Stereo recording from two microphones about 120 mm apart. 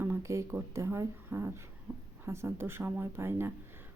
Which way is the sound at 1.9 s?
Centre (ahead or behind).